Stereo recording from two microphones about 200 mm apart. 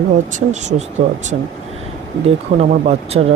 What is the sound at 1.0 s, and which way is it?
Speech, 30° right (ahead or behind).